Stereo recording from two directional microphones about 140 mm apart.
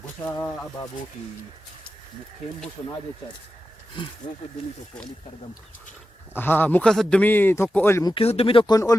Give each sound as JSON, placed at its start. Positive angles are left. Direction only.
{"t": 0.3, "sound": "a man's voice", "side_deg": 10}
{"t": 4.2, "sound": "speech", "side_deg": 40}
{"t": 6.3, "sound": "a man's voice", "side_deg": 15}
{"t": 8.0, "sound": "speech", "side_deg": 40}